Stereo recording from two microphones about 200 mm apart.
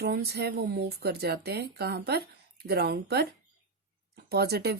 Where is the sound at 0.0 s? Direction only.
55° right (ahead or behind).